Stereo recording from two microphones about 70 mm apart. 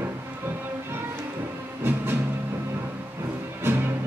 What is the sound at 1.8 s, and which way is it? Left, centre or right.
Music, right.